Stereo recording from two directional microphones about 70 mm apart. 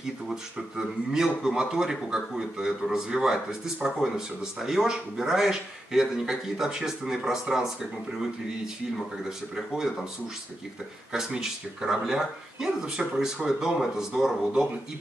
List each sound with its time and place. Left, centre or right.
0.0 s a man's voice: centre
11.1 s a man's voice: centre